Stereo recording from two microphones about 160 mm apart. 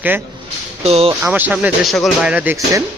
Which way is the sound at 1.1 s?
15° right (ahead or behind).